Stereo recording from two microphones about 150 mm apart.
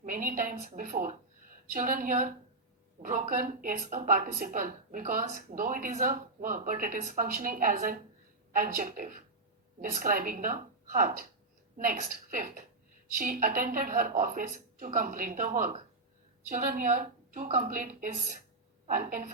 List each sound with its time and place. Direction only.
0.0 s a woman's voice: 65° right (ahead or behind)